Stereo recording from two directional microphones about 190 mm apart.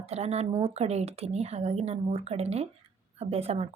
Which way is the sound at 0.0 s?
35° right (ahead or behind).